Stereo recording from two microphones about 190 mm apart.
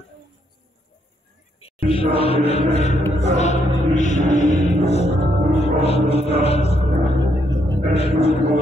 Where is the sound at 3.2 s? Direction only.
35° left (ahead or behind).